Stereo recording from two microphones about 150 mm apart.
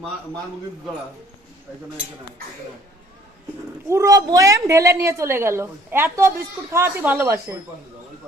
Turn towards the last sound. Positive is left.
turn(degrees=-20)  # may be behind; listen again after turning